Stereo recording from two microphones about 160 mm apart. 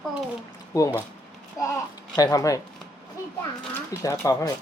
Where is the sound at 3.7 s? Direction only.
20° left (ahead or behind).